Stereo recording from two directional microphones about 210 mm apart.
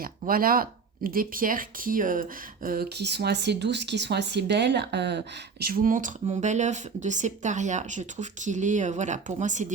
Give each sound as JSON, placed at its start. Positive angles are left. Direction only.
{"t": 0.0, "sound": "speech", "side_deg": -45}
{"t": 5.7, "sound": "speech", "side_deg": -40}